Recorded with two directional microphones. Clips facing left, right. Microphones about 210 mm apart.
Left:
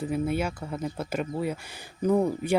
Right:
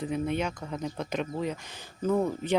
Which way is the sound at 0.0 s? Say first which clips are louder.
Left 2 dB; 5° left (ahead or behind).